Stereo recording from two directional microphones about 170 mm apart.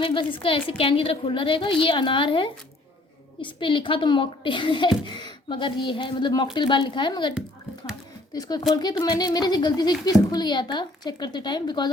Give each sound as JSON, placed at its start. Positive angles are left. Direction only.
{"t": 0.0, "sound": "a woman's voice", "side_deg": 30}